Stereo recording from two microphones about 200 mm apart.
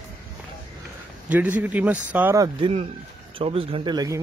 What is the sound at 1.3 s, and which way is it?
Speech, 10° right (ahead or behind).